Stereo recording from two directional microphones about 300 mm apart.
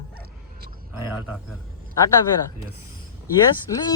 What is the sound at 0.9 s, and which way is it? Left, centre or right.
Speech, centre.